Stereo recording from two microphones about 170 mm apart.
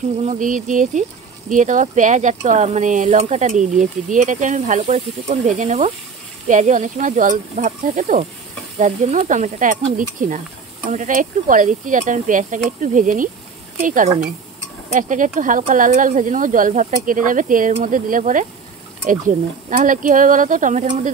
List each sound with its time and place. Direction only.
0.2 s speech: 50° right (ahead or behind)